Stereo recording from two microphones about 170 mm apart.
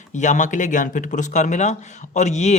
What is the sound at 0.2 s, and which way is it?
A man's voice, 45° left (ahead or behind).